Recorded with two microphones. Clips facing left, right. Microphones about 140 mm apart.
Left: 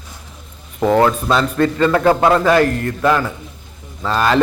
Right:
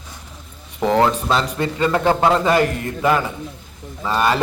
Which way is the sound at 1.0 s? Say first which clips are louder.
Left 3 dB; 20° right (ahead or behind).